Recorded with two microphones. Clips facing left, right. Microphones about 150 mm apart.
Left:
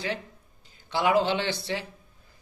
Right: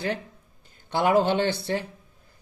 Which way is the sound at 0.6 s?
55° right (ahead or behind).